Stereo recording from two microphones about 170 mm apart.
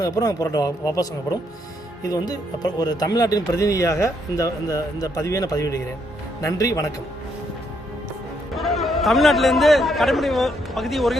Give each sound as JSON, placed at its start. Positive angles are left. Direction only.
{"t": 0.0, "sound": "speech", "side_deg": 20}
{"t": 2.0, "sound": "speech", "side_deg": 20}
{"t": 8.5, "sound": "a man's voice", "side_deg": 0}